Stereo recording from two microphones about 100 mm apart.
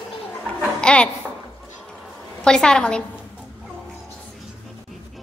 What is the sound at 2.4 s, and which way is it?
Speech, 10° left (ahead or behind).